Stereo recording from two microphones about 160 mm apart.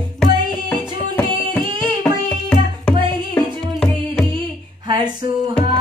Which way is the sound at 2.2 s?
5° left (ahead or behind).